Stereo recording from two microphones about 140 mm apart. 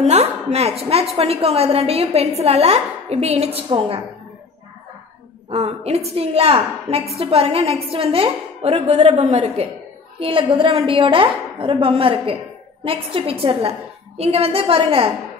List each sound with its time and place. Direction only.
0.0 s a woman's voice: 50° right (ahead or behind)
5.5 s a woman's voice: 50° right (ahead or behind)
10.2 s a woman's voice: 40° right (ahead or behind)